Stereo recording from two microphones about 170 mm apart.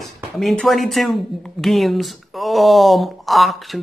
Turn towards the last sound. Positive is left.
turn(degrees=0)  # may be behind; listen again after turning